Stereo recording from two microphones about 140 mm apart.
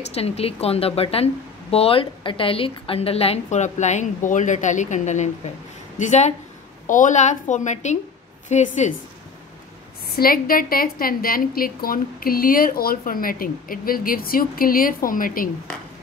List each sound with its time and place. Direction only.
0.1 s a woman's voice: 45° left (ahead or behind)
10.0 s a woman's voice: 90° left